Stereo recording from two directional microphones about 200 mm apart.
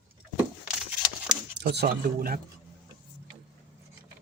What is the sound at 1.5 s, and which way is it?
Speech, 55° right (ahead or behind).